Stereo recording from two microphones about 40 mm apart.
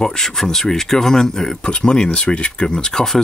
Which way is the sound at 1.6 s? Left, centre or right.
Left.